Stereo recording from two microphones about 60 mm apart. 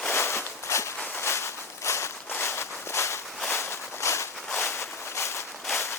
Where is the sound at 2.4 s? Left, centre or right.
Left.